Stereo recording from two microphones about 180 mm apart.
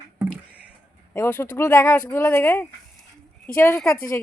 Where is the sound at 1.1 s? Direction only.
15° left (ahead or behind).